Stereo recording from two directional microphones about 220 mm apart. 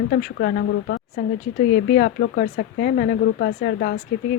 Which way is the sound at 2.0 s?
45° left (ahead or behind).